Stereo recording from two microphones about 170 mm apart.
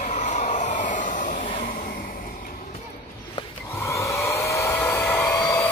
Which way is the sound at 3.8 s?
15° left (ahead or behind).